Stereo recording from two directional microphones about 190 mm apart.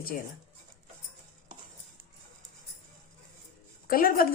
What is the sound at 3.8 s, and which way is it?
Speech, 50° left (ahead or behind).